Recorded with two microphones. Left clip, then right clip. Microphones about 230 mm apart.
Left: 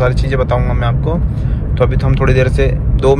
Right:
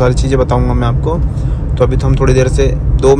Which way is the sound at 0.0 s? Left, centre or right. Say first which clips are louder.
Right 3 dB; centre.